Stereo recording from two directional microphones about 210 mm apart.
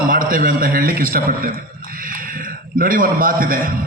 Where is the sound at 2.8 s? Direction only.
40° right (ahead or behind).